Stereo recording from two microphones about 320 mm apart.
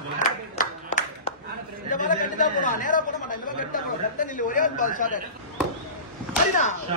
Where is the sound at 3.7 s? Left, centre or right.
Left.